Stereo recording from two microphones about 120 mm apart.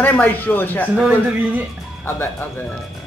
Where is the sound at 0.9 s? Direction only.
10° right (ahead or behind).